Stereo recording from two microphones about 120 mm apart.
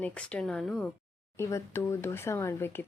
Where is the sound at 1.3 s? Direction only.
20° left (ahead or behind).